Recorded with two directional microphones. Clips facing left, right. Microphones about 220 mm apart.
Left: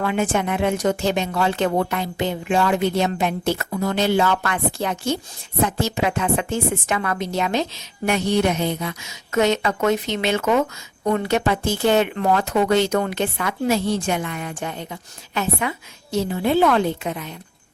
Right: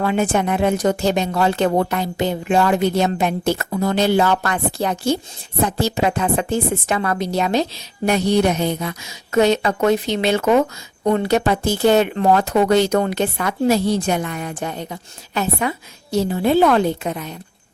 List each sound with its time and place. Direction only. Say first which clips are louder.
0.0 s speech: right 3 dB; 35° right (ahead or behind)